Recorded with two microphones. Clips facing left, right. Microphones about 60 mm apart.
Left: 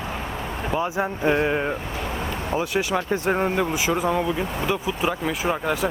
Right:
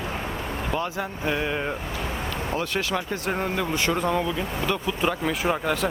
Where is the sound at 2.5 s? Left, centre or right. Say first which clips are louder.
Left 4 dB; centre.